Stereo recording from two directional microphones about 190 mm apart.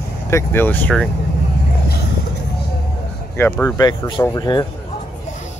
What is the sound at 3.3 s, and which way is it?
Speech, 10° left (ahead or behind).